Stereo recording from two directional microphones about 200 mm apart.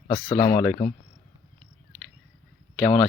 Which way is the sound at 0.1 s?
15° left (ahead or behind).